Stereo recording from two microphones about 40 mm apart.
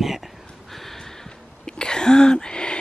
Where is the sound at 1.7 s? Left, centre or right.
Centre.